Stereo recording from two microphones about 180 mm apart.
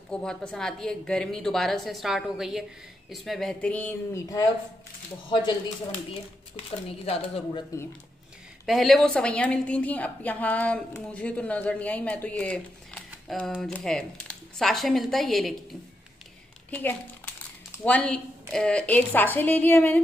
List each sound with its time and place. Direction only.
0.1 s a woman's voice: 5° left (ahead or behind)
7.1 s speech: 30° left (ahead or behind)
8.6 s a woman's voice: centre (ahead or behind)
16.7 s a woman's voice: 10° left (ahead or behind)